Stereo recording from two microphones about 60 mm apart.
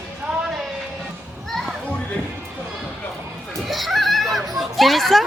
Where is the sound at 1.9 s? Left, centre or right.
Centre.